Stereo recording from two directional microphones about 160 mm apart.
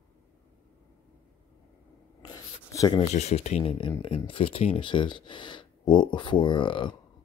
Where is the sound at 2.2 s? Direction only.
20° left (ahead or behind).